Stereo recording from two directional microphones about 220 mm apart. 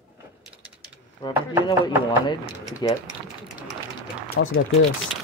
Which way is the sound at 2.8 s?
20° left (ahead or behind).